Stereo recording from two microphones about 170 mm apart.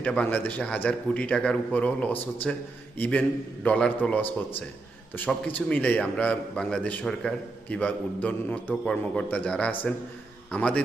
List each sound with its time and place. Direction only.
0.0 s a man's voice: 5° left (ahead or behind)